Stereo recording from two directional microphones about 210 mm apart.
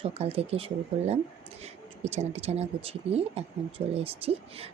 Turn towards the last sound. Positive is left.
turn(degrees=-30)  # may be behind; listen again after turning